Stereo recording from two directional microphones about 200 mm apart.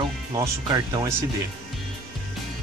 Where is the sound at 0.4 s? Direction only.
20° right (ahead or behind).